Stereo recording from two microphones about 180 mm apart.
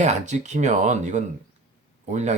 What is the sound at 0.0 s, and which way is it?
Speech, 40° right (ahead or behind).